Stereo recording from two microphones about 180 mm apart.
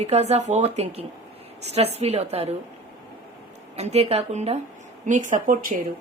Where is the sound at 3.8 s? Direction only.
35° right (ahead or behind).